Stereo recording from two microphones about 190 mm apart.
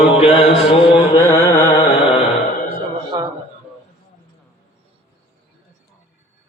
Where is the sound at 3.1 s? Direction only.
20° right (ahead or behind).